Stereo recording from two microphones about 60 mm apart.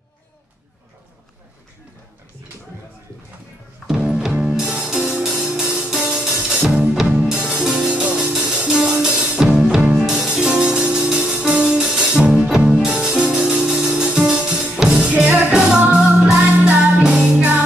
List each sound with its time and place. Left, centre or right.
3.8 s music: centre
7.9 s music: right
16.3 s music: right